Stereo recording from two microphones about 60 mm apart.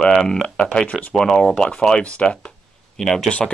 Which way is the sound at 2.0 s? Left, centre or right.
Left.